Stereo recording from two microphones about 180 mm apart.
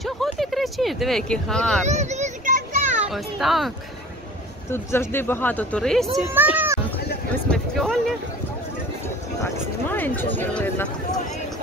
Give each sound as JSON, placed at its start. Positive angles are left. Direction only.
{"t": 0.0, "sound": "speech", "side_deg": 0}
{"t": 1.9, "sound": "children playing", "side_deg": -40}
{"t": 3.0, "sound": "a child's voice", "side_deg": 0}
{"t": 4.6, "sound": "speech", "side_deg": 15}
{"t": 6.3, "sound": "speech", "side_deg": -10}
{"t": 7.4, "sound": "speech", "side_deg": 5}
{"t": 9.4, "sound": "speech", "side_deg": 10}